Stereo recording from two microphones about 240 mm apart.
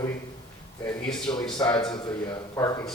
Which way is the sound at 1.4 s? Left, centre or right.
Centre.